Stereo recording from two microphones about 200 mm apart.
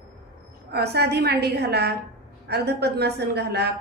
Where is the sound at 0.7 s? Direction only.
55° right (ahead or behind).